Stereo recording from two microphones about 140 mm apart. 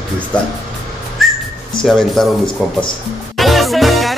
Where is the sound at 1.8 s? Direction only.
Centre (ahead or behind).